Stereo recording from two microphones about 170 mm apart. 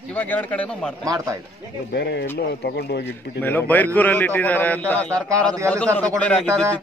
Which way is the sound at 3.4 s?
10° left (ahead or behind).